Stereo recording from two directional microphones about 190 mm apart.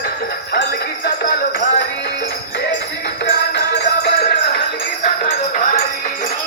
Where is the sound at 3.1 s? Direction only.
60° left (ahead or behind).